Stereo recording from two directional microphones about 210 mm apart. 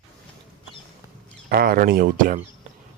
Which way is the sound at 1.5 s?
45° right (ahead or behind).